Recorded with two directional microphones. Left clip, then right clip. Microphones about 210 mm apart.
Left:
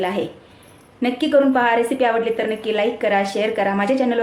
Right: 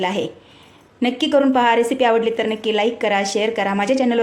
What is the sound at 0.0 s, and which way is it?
A woman's voice, 40° right (ahead or behind).